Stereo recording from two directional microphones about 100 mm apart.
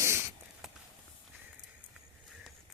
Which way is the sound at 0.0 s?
25° right (ahead or behind).